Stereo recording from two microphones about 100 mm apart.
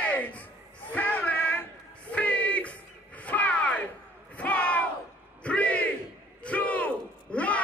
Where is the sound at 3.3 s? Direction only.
15° left (ahead or behind).